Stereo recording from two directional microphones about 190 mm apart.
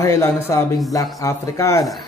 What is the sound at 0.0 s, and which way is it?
A man's voice, 15° left (ahead or behind).